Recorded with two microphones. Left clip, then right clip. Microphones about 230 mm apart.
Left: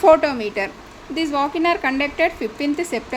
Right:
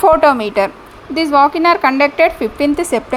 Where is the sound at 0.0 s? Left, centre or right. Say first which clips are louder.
Right 4 dB; centre.